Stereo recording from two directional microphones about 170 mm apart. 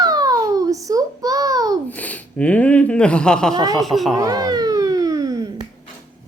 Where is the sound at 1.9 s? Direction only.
10° left (ahead or behind).